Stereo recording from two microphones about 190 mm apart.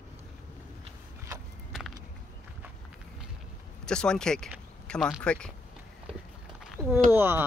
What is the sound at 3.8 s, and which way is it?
Speech, 5° left (ahead or behind).